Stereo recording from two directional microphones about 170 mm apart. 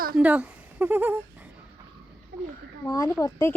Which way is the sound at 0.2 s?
10° right (ahead or behind).